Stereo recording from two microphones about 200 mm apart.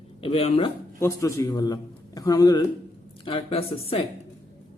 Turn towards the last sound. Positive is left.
turn(degrees=30)  # may be behind; listen again after turning